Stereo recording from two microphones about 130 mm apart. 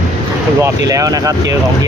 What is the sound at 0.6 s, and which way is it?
Speech, 25° right (ahead or behind).